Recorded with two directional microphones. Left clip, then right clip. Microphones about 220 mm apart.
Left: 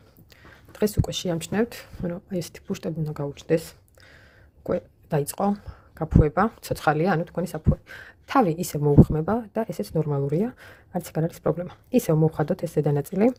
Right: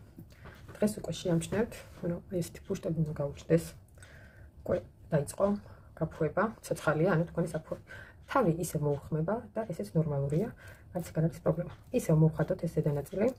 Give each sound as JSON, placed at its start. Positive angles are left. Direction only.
{"t": 0.8, "sound": "speech", "side_deg": 45}